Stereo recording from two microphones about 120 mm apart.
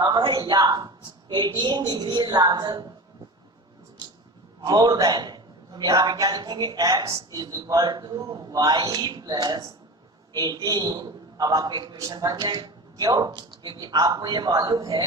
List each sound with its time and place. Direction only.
0.0 s speech: 40° right (ahead or behind)
4.6 s speech: 35° right (ahead or behind)